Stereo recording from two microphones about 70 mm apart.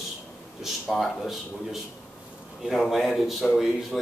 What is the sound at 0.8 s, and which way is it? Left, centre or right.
Speech, centre.